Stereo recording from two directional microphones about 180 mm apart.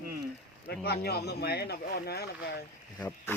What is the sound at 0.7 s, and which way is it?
Speech, 65° left (ahead or behind).